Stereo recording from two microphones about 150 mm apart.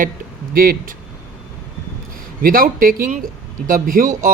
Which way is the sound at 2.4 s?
70° right (ahead or behind).